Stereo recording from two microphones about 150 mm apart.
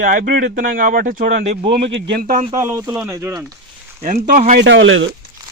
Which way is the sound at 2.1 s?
75° right (ahead or behind).